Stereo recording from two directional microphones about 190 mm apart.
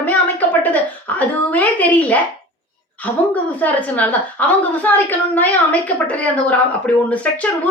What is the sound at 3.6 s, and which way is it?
A woman's voice, 10° left (ahead or behind).